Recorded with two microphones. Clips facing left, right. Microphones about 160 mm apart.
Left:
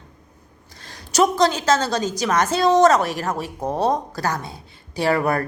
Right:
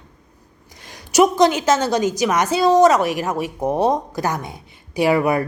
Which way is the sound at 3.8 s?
20° right (ahead or behind).